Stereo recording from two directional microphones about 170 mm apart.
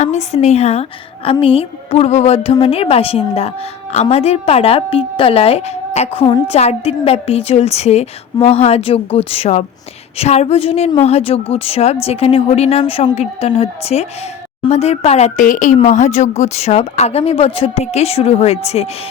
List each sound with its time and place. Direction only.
0.0 s a woman's voice: 40° left (ahead or behind)